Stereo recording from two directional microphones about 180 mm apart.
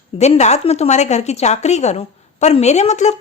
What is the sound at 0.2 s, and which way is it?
A woman's voice, 40° left (ahead or behind).